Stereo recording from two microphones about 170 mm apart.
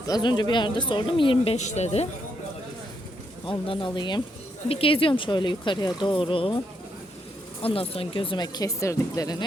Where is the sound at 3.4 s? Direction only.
30° left (ahead or behind).